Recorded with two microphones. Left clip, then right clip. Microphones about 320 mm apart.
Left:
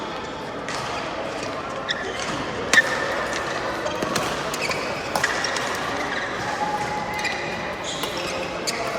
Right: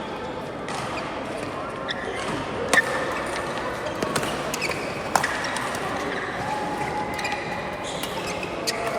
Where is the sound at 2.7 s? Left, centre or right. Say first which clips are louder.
Left 3 dB; centre.